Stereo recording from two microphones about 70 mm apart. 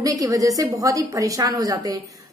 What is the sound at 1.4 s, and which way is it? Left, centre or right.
Speech, right.